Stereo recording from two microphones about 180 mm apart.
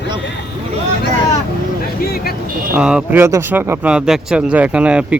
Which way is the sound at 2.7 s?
5° right (ahead or behind).